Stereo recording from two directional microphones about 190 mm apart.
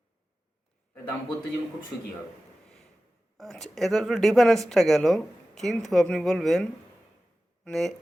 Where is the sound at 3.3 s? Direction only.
Centre (ahead or behind).